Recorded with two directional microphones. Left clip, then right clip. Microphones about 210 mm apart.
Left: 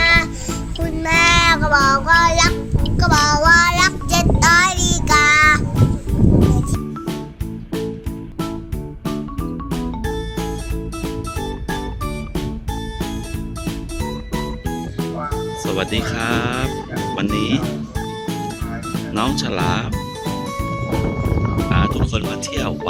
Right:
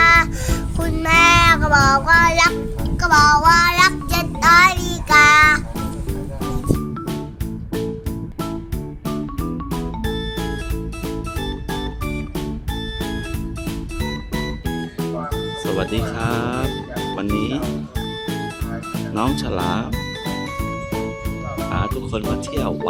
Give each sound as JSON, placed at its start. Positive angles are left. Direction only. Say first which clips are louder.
{"t": 0.0, "sound": "music", "louder": "right 2 dB", "side_deg": -35}
{"t": 1.0, "sound": "music", "louder": "right 1 dB", "side_deg": -5}
{"t": 3.5, "sound": "music", "louder": "left 1 dB", "side_deg": 20}
{"t": 4.1, "sound": "child singing", "louder": "even", "side_deg": 20}
{"t": 4.5, "sound": "child singing", "louder": "right 4 dB", "side_deg": 10}
{"t": 4.8, "sound": "music", "louder": "right 1 dB", "side_deg": 25}
{"t": 5.2, "sound": "music", "louder": "right 1 dB", "side_deg": 5}
{"t": 9.0, "sound": "music", "louder": "even", "side_deg": 0}
{"t": 13.7, "sound": "music", "louder": "left 1 dB", "side_deg": 0}
{"t": 18.9, "sound": "music", "louder": "left 1 dB", "side_deg": 0}
{"t": 21.5, "sound": "speech", "louder": "left 2 dB", "side_deg": 0}